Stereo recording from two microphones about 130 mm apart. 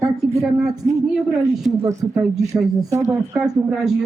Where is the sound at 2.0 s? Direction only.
20° right (ahead or behind).